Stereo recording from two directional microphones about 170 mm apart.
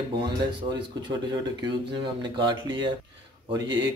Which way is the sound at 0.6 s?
25° right (ahead or behind).